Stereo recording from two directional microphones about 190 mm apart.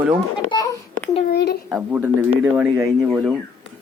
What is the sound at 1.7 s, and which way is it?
Speech, 5° right (ahead or behind).